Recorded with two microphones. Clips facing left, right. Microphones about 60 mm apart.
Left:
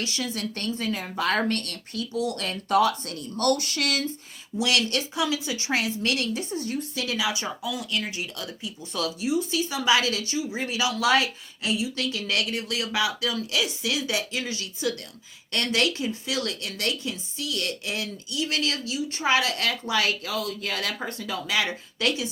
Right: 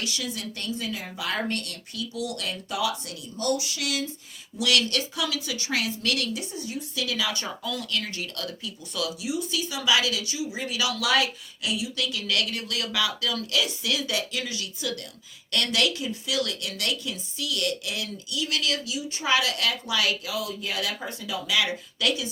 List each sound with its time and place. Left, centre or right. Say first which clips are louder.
0.0 s speech: left 2 dB; left
4.5 s a woman's voice: even; left
7.2 s speech: left 2 dB; centre
9.0 s a woman's voice: left 3 dB; left